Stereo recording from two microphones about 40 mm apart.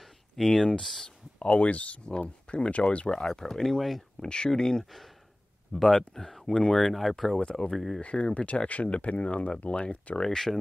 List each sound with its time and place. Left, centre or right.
0.4 s speech: centre
1.0 s speech: left
3.1 s speech: centre
6.8 s speech: centre
8.0 s speech: left
10.1 s speech: centre